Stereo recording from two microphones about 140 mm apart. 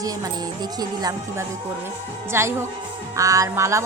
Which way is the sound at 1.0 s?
25° right (ahead or behind).